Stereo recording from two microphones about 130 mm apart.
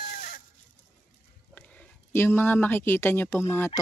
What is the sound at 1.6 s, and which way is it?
Speech, 10° left (ahead or behind).